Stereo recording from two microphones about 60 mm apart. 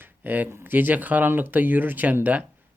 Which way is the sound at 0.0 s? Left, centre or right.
Right.